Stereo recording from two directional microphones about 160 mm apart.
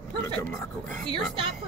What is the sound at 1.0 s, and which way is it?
Speech, 30° right (ahead or behind).